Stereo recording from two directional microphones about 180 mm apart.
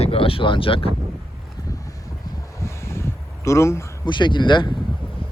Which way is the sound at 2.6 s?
15° left (ahead or behind).